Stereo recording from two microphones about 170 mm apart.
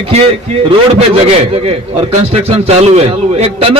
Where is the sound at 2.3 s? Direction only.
35° right (ahead or behind).